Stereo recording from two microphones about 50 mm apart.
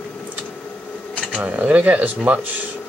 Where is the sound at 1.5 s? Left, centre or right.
Right.